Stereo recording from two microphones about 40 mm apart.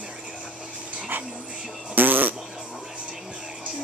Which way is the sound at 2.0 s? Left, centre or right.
Right.